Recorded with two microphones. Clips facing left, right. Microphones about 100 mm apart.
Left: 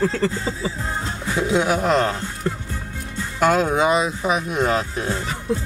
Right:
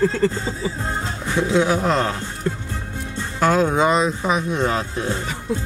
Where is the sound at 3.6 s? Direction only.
10° left (ahead or behind).